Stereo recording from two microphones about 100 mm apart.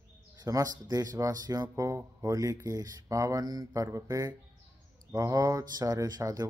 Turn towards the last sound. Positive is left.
turn(degrees=-35)  # may be behind; listen again after turning